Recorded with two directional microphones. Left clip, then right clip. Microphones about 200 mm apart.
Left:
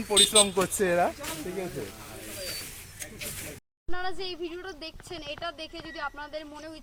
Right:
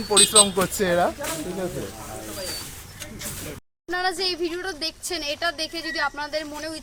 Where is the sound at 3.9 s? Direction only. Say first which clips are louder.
Right 10 dB; 5° right (ahead or behind).